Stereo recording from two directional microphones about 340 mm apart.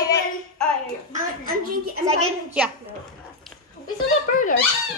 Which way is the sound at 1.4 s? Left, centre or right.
Right.